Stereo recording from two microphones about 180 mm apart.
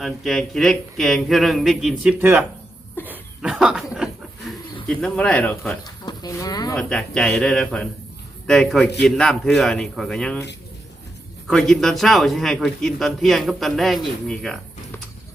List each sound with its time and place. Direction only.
0.0 s a man's voice: centre (ahead or behind)
2.1 s speech: 10° right (ahead or behind)
3.1 s chuckle: 5° right (ahead or behind)
4.9 s speech: 5° left (ahead or behind)
5.8 s speech: 20° left (ahead or behind)
6.7 s a man's voice: 5° left (ahead or behind)
11.4 s a man's voice: centre (ahead or behind)